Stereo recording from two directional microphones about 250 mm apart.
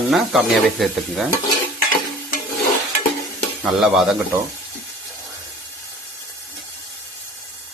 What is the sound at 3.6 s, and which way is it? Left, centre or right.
Speech, centre.